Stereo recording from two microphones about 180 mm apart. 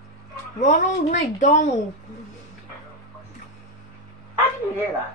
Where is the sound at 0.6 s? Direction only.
45° left (ahead or behind).